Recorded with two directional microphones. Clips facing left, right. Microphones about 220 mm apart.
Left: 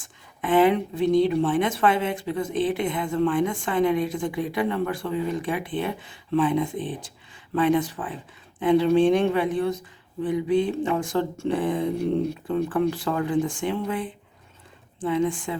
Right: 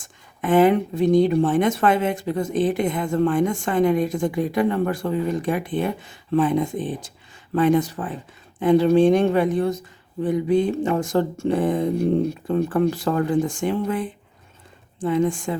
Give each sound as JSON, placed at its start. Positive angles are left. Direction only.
{"t": 0.0, "sound": "speech", "side_deg": -45}